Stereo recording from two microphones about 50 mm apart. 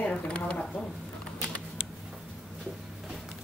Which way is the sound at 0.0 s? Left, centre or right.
Left.